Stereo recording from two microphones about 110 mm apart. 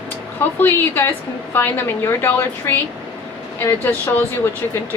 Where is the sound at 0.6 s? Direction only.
20° left (ahead or behind).